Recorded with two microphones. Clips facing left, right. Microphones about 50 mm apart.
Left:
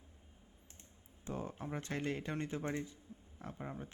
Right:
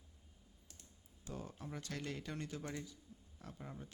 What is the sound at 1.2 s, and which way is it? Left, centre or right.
Speech, left.